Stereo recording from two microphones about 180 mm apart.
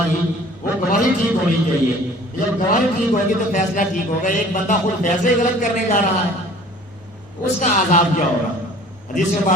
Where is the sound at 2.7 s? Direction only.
45° left (ahead or behind).